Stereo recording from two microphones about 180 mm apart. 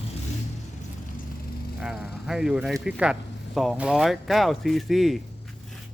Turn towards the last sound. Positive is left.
turn(degrees=0)  # may be behind; listen again after turning